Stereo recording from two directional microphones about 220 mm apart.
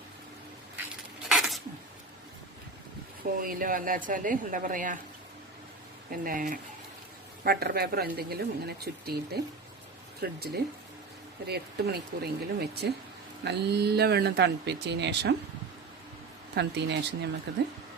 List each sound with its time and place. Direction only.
1.3 s a sound: centre (ahead or behind)
3.4 s speech: 40° right (ahead or behind)
6.1 s speech: 40° right (ahead or behind)
16.6 s speech: 50° right (ahead or behind)